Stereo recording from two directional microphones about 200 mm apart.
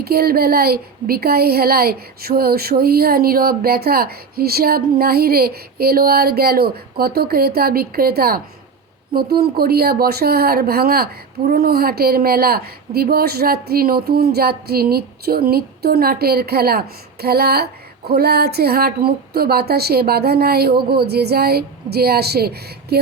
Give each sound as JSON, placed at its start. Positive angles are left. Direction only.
{"t": 0.0, "sound": "speech", "side_deg": -50}